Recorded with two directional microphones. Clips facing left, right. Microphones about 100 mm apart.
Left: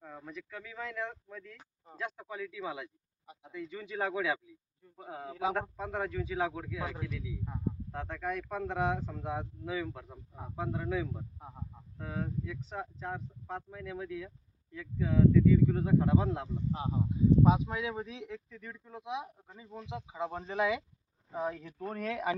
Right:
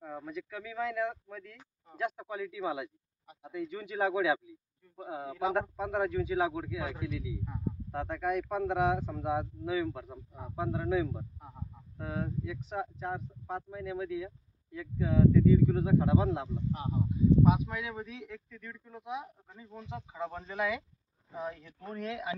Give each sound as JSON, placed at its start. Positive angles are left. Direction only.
{"t": 0.0, "sound": "speech", "side_deg": -5}
{"t": 16.7, "sound": "speech", "side_deg": 25}
{"t": 21.3, "sound": "speech", "side_deg": 40}